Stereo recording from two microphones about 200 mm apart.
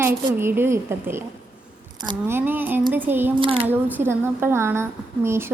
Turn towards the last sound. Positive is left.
turn(degrees=-10)  # may be behind; listen again after turning